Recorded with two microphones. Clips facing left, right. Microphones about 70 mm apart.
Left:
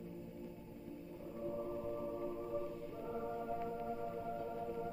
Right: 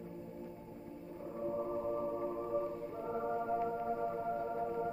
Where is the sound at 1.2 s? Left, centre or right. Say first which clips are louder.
Right 5 dB; right.